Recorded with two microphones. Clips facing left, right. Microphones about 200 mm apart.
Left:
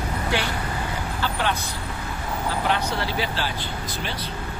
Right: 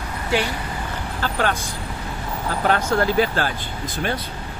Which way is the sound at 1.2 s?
45° right (ahead or behind).